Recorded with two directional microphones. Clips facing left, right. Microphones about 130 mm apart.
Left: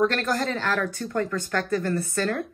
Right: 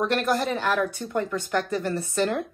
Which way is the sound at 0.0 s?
15° right (ahead or behind).